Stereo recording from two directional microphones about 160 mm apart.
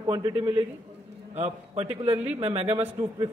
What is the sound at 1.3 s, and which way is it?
A man's voice, 40° right (ahead or behind).